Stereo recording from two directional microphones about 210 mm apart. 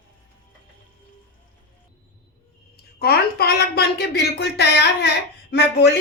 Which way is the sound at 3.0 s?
50° left (ahead or behind).